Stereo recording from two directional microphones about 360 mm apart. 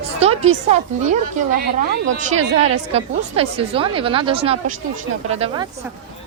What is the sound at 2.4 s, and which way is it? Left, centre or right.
Speech, centre.